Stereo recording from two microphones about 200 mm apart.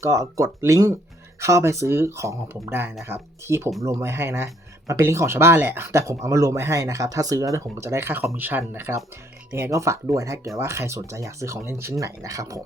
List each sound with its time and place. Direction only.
0.0 s speech: 15° right (ahead or behind)